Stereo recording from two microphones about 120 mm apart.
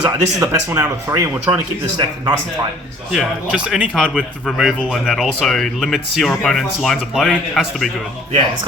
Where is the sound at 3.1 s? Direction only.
5° right (ahead or behind).